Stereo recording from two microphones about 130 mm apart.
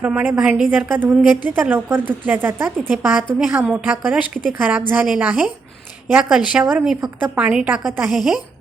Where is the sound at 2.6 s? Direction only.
5° left (ahead or behind).